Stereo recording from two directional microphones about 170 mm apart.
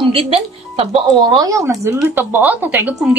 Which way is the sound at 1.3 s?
20° right (ahead or behind).